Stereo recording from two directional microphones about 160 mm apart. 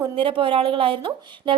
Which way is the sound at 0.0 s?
30° right (ahead or behind).